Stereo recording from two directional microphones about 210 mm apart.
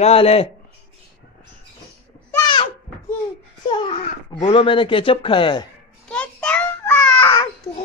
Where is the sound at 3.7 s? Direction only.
25° left (ahead or behind).